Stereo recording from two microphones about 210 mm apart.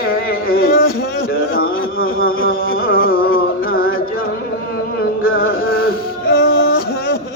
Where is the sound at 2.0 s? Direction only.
45° left (ahead or behind).